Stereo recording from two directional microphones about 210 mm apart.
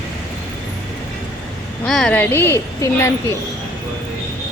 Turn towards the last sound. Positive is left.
turn(degrees=15)  # may be behind; listen again after turning